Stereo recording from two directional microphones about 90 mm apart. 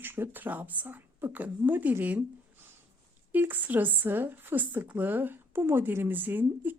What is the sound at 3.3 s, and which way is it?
Speech, 20° right (ahead or behind).